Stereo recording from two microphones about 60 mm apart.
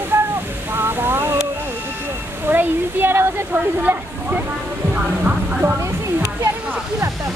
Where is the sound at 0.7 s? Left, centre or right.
Right.